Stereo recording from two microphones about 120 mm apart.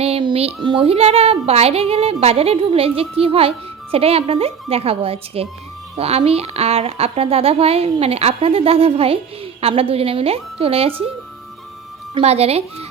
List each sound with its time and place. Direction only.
0.0 s child singing: 55° right (ahead or behind)
0.3 s a child's voice: 50° right (ahead or behind)
12.2 s a woman's voice: 60° right (ahead or behind)